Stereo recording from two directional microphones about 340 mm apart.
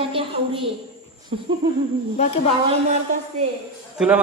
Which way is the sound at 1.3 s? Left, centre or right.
Centre.